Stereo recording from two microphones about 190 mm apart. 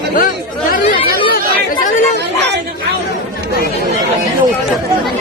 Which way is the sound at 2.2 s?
65° right (ahead or behind).